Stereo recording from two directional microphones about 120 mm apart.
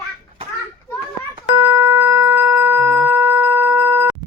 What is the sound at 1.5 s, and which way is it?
Music, 20° right (ahead or behind).